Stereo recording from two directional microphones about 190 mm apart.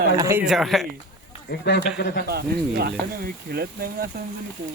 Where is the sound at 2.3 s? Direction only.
55° right (ahead or behind).